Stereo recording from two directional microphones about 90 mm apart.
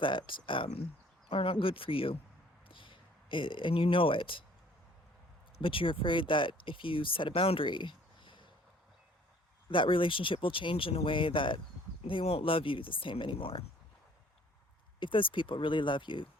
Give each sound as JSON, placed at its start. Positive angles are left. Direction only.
{"t": 0.0, "sound": "speech", "side_deg": 65}
{"t": 2.6, "sound": "speech", "side_deg": 70}
{"t": 5.6, "sound": "speech", "side_deg": 75}
{"t": 9.6, "sound": "speech", "side_deg": 70}
{"t": 12.0, "sound": "speech", "side_deg": 85}
{"t": 14.9, "sound": "speech", "side_deg": 65}